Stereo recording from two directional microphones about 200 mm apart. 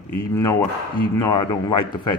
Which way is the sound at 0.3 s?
15° left (ahead or behind).